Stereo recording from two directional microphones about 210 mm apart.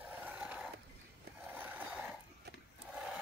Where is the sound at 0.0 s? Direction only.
10° right (ahead or behind).